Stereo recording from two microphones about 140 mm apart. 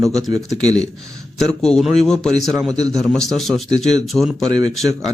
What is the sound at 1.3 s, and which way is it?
A man's voice, 5° left (ahead or behind).